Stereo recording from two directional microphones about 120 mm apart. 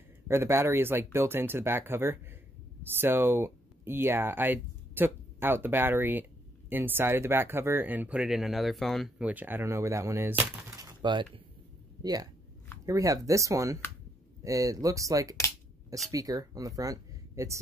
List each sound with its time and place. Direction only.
0.3 s speech: 20° right (ahead or behind); by 9.1 s centre (ahead or behind)
9.2 s speech: 15° right (ahead or behind)
11.1 s speech: 40° right (ahead or behind)